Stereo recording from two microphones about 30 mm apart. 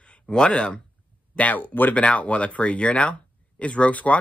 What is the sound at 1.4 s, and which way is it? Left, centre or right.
Speech, left.